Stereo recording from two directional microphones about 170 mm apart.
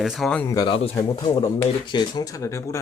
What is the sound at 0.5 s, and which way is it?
Speech, 25° left (ahead or behind).